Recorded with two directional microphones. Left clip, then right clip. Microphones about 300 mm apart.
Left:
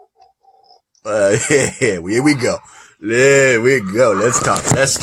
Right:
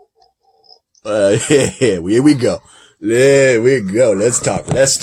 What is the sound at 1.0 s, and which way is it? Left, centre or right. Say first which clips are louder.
Speech: right 1 dB; centre.